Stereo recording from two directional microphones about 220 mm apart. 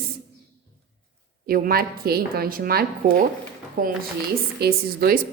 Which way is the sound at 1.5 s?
40° right (ahead or behind).